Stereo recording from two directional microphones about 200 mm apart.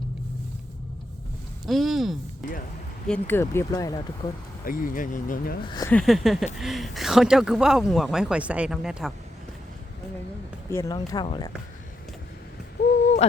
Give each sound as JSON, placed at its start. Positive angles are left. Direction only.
{"t": 1.6, "sound": "speech", "side_deg": 0}
{"t": 3.1, "sound": "speech", "side_deg": 10}
{"t": 4.6, "sound": "speech", "side_deg": 45}
{"t": 5.6, "sound": "speech", "side_deg": 20}
{"t": 5.9, "sound": "speech", "side_deg": 0}
{"t": 10.7, "sound": "speech", "side_deg": 15}
{"t": 12.8, "sound": "owl", "side_deg": 55}